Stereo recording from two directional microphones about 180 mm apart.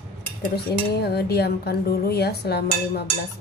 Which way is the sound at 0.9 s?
60° left (ahead or behind).